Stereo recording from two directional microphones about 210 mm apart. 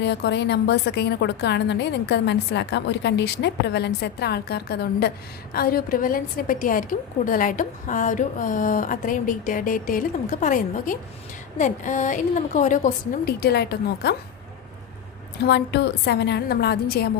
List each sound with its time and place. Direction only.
0.0 s a woman's voice: 55° left (ahead or behind)
15.4 s a woman's voice: 50° left (ahead or behind)